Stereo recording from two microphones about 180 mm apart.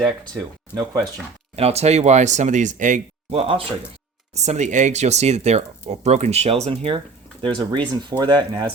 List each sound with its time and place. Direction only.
0.7 s speech: 25° right (ahead or behind)
1.5 s speech: 35° right (ahead or behind)